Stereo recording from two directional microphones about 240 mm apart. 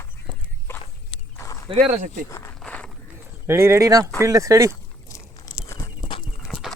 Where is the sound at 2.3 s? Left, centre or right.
Centre.